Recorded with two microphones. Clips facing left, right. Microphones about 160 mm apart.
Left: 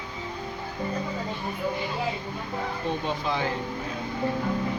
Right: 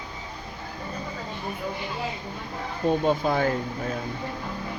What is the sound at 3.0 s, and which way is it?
Speech, 45° right (ahead or behind).